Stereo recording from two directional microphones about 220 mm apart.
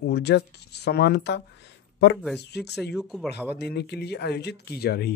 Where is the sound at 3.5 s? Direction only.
50° left (ahead or behind).